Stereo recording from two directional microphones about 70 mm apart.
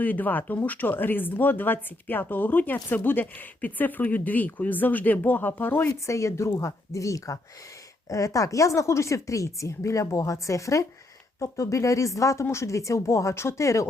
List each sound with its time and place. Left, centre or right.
0.0 s speech: left
5.9 s speech: left